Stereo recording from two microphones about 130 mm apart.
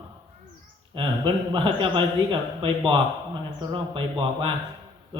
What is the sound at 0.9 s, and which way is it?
A man's voice, 40° right (ahead or behind).